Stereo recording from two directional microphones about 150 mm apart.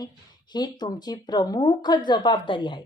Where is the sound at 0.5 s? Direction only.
25° left (ahead or behind).